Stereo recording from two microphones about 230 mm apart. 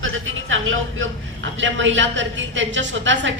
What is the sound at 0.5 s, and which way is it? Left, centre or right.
A man's voice, right.